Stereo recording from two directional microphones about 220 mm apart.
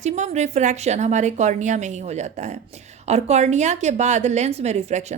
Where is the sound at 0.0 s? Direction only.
30° right (ahead or behind).